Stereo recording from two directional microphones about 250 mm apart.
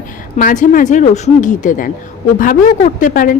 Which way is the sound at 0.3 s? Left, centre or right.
Left.